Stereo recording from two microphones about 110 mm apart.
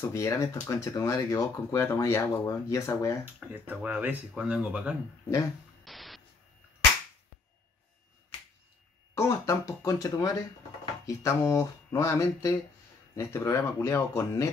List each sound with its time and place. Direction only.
0.0 s speech: 25° left (ahead or behind)
3.3 s speech: 15° right (ahead or behind)
5.9 s static: centre (ahead or behind)
9.1 s speech: 25° left (ahead or behind)